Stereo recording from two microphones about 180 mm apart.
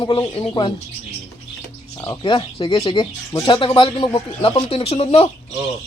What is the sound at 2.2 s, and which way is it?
Speech, 25° left (ahead or behind).